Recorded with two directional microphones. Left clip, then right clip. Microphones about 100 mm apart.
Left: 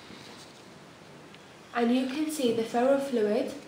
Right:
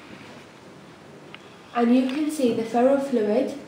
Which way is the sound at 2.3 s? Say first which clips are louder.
Right 3 dB; 25° left (ahead or behind).